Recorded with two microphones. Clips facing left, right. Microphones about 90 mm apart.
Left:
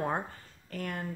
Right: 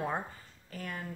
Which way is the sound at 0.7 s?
50° left (ahead or behind).